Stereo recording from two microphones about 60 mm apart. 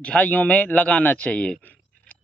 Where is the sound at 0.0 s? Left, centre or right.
Left.